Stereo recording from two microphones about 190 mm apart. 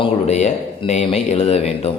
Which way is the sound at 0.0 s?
35° left (ahead or behind).